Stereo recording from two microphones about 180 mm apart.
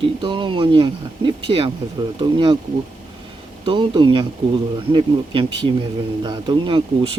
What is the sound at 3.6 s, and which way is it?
Speech, 25° right (ahead or behind).